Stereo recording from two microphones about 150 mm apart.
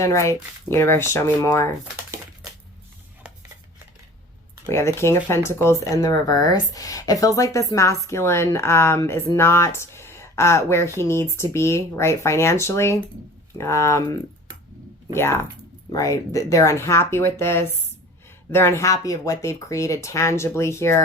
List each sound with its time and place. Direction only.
0.0 s speech: 20° left (ahead or behind)
4.6 s speech: 15° left (ahead or behind)